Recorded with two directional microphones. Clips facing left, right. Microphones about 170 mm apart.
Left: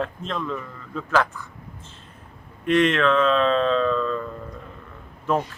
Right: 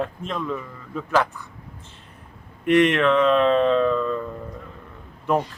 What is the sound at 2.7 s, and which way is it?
Speech, 15° right (ahead or behind).